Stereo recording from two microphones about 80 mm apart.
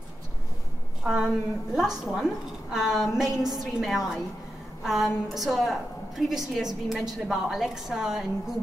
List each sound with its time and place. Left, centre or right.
1.0 s a woman's voice: centre